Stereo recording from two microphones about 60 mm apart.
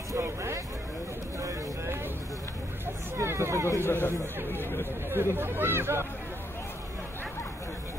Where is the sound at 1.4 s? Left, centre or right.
Right.